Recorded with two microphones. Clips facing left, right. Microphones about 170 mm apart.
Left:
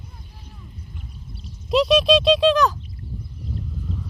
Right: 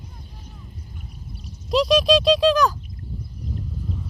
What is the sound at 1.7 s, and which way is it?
Speech, centre (ahead or behind).